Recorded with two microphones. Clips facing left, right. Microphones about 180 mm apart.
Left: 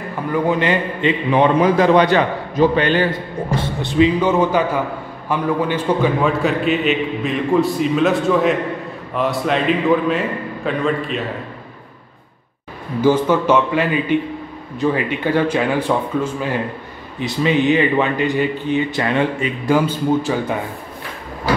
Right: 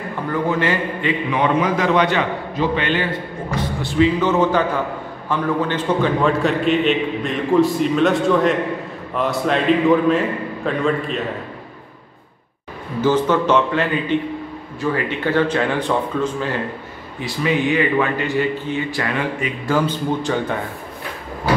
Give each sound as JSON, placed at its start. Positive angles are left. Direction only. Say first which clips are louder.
{"t": 0.3, "sound": "speech", "louder": "left 3 dB", "side_deg": 15}
{"t": 1.3, "sound": "a man's voice", "louder": "left 5 dB", "side_deg": 35}
{"t": 13.0, "sound": "speech", "louder": "left 2 dB", "side_deg": 10}
{"t": 17.2, "sound": "speech", "louder": "left 3 dB", "side_deg": 20}